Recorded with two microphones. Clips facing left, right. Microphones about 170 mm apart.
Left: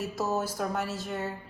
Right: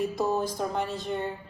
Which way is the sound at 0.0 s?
5° left (ahead or behind).